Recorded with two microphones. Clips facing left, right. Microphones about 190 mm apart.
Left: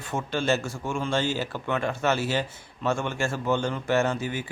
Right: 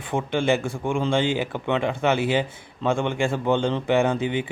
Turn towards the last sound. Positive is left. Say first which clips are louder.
# right 4 dB
turn(degrees=-20)  # may be behind; listen again after turning